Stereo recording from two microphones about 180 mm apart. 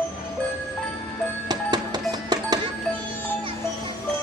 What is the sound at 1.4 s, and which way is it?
Music, 20° right (ahead or behind).